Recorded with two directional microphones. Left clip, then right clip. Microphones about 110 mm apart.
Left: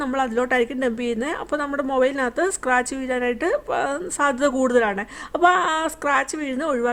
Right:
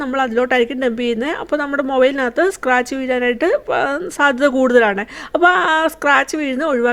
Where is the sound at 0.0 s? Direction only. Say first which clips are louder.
Right 5 dB; 20° right (ahead or behind).